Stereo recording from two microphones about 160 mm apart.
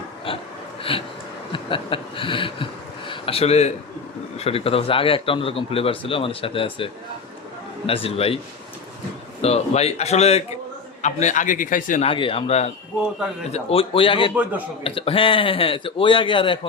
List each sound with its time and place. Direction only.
0.3 s snort: 35° left (ahead or behind)
0.8 s a sound: 35° left (ahead or behind)
1.5 s speech: 35° left (ahead or behind)
3.1 s a sound: 35° left (ahead or behind)
4.4 s speech: 40° left (ahead or behind)
7.9 s speech: 35° left (ahead or behind)
9.4 s a man's voice: 40° left (ahead or behind)
12.0 s speech: 35° left (ahead or behind)